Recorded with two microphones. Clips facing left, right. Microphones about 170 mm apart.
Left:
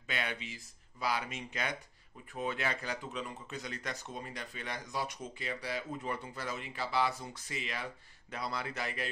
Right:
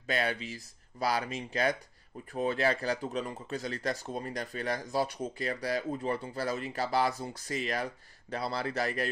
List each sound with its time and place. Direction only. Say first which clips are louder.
0.0 s speech: right 7 dB; 40° right (ahead or behind)